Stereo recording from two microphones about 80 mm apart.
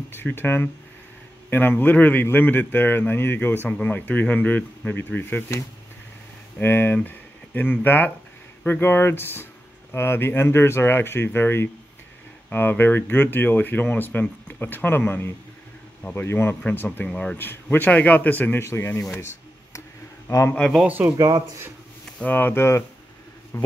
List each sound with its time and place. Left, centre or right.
0.1 s speech: left
6.6 s speech: left
17.1 s speech: centre
17.4 s speech: left
19.1 s a sound: left
20.2 s speech: left
20.8 s speech: centre
22.2 s speech: left